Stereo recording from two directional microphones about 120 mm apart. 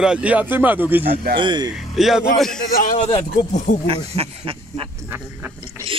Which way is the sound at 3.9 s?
50° right (ahead or behind).